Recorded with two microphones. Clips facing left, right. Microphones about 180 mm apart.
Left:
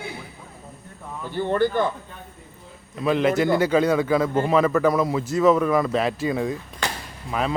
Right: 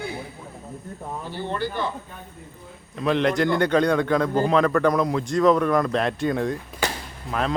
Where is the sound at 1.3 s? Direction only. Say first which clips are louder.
Left 8 dB; 50° left (ahead or behind).